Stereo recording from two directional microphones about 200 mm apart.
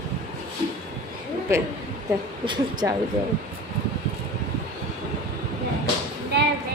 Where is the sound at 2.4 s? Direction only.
20° right (ahead or behind).